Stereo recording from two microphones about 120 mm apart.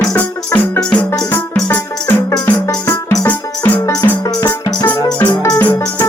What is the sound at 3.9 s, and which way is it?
Music, 30° left (ahead or behind).